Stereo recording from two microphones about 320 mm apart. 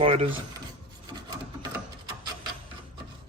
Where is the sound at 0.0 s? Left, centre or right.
Centre.